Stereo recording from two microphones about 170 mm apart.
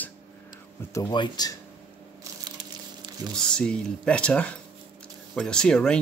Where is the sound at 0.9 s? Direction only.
25° left (ahead or behind).